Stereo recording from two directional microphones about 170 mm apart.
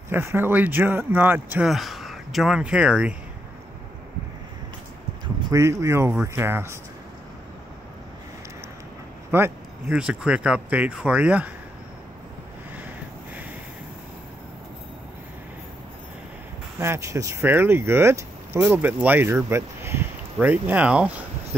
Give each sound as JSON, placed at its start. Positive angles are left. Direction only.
{"t": 0.1, "sound": "speech", "side_deg": -15}
{"t": 5.4, "sound": "speech", "side_deg": -15}
{"t": 9.3, "sound": "speech", "side_deg": -10}
{"t": 16.8, "sound": "speech", "side_deg": -15}